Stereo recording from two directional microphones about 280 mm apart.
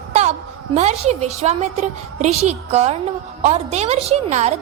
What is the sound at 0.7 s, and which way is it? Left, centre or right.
A woman's voice, right.